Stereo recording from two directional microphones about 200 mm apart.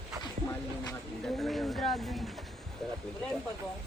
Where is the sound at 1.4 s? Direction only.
Centre (ahead or behind).